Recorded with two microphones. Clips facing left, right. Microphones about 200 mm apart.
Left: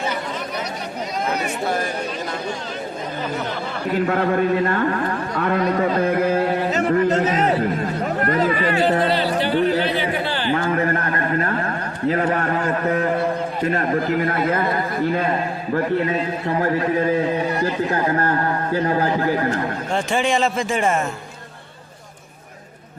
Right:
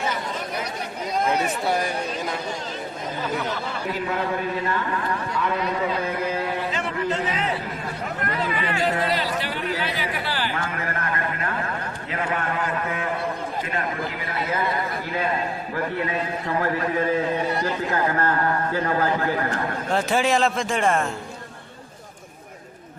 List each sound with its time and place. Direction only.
4.1 s a man's voice: 55° left (ahead or behind)
17.9 s speech: 35° left (ahead or behind)
19.9 s a man's voice: centre (ahead or behind)